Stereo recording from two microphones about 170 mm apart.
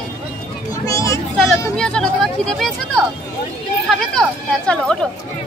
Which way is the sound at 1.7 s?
5° left (ahead or behind).